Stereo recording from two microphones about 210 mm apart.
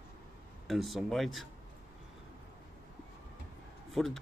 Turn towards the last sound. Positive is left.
turn(degrees=0)  # may be behind; listen again after turning